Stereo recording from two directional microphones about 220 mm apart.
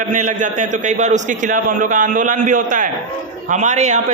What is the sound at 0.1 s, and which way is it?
A man's voice, 35° right (ahead or behind).